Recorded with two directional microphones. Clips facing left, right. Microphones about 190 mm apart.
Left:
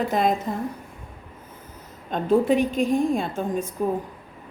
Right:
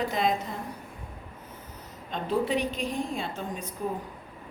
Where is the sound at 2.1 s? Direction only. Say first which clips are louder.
Left 8 dB; 50° left (ahead or behind).